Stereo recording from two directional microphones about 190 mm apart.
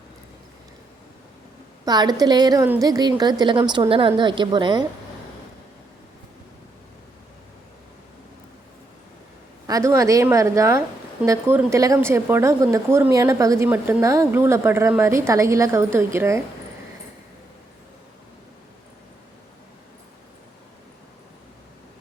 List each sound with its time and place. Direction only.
1.8 s a woman's voice: 20° right (ahead or behind)
9.6 s a woman's voice: 15° right (ahead or behind)